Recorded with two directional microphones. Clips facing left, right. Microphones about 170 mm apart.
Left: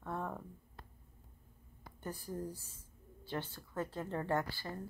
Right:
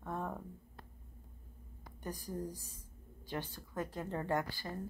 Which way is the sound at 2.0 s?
15° right (ahead or behind).